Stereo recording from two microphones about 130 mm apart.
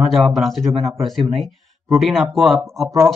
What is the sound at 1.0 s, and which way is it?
Speech, centre (ahead or behind).